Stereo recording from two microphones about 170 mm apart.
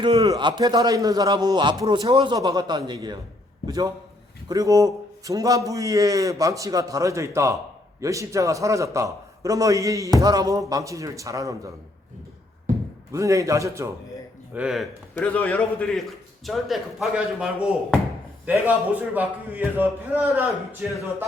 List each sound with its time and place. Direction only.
0.0 s a man's voice: 25° right (ahead or behind)
13.1 s a man's voice: 20° right (ahead or behind)
14.5 s speech: 5° right (ahead or behind)
15.1 s a man's voice: 10° left (ahead or behind)
19.1 s a man's voice: 10° right (ahead or behind)